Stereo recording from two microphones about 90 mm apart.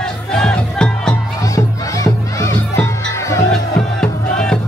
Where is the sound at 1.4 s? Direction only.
40° left (ahead or behind).